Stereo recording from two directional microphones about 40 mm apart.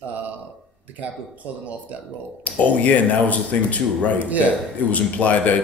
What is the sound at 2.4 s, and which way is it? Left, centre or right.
Speech, left.